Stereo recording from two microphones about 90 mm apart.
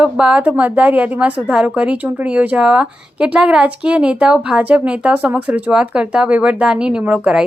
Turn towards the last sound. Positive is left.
turn(degrees=-15)  # may be behind; listen again after turning